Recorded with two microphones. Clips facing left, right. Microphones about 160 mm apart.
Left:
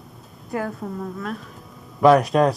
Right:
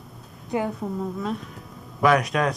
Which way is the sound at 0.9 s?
15° right (ahead or behind).